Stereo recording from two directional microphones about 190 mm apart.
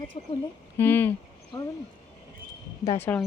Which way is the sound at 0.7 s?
10° left (ahead or behind).